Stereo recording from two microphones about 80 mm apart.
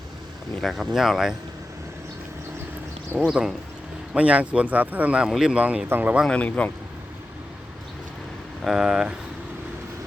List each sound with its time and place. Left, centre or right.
0.6 s speech: centre
3.2 s speech: centre
4.1 s speech: centre
6.2 s a man's voice: centre
8.6 s speech: centre